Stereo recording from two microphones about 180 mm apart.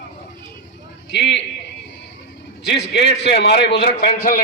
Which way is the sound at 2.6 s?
75° left (ahead or behind).